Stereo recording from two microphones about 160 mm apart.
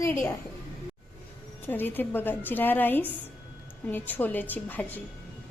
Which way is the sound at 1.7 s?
10° left (ahead or behind).